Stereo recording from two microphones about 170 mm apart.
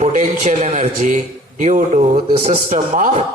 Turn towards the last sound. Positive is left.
turn(degrees=-45)  # may be behind; listen again after turning